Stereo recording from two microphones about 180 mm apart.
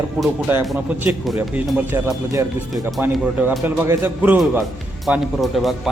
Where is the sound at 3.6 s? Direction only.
15° right (ahead or behind).